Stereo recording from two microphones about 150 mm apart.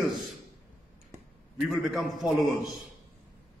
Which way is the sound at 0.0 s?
Centre (ahead or behind).